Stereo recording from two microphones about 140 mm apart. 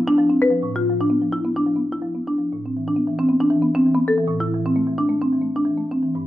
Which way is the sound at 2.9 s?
5° right (ahead or behind).